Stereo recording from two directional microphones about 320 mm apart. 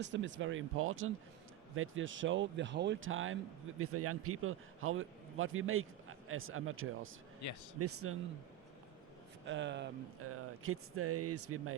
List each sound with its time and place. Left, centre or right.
0.0 s a man's voice: right
7.4 s speech: left
7.8 s speech: right
9.5 s speech: right